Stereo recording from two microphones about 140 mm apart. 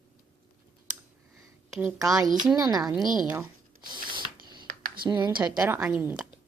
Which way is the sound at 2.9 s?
5° right (ahead or behind).